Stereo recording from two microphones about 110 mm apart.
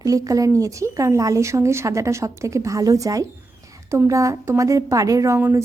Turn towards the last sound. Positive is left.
turn(degrees=-25)  # may be behind; listen again after turning